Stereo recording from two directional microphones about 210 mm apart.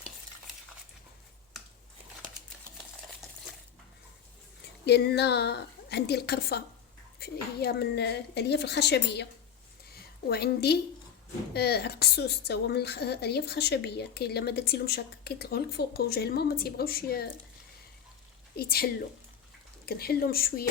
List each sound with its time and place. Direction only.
4.9 s a woman's voice: 50° left (ahead or behind)
9.9 s a sound: 50° left (ahead or behind)
11.5 s a woman's voice: 50° left (ahead or behind)
18.5 s a woman's voice: 45° left (ahead or behind)